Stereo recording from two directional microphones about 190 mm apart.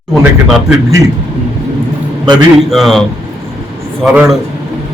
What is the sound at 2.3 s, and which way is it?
Speech, centre (ahead or behind).